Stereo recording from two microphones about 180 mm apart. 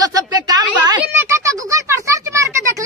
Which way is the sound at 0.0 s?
20° right (ahead or behind).